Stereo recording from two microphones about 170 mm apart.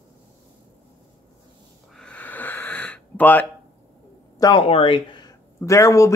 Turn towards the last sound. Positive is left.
turn(degrees=20)  # may be behind; listen again after turning